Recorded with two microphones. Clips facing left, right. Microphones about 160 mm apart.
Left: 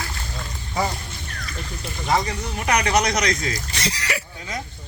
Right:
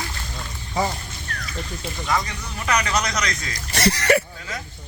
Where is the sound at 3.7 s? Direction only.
55° right (ahead or behind).